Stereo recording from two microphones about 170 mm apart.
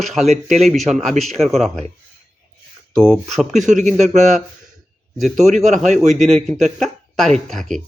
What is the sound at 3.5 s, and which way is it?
Speech, 45° right (ahead or behind).